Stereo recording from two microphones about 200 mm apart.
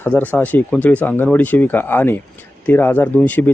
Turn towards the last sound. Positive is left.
turn(degrees=10)  # may be behind; listen again after turning